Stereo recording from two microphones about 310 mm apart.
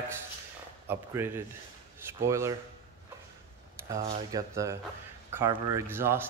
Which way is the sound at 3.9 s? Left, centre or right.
Right.